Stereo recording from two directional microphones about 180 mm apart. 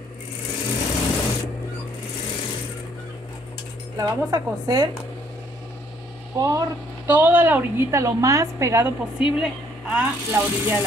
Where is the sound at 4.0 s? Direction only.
20° right (ahead or behind).